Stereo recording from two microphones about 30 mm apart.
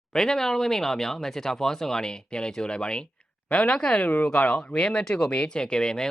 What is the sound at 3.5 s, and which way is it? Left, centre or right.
Speech, left.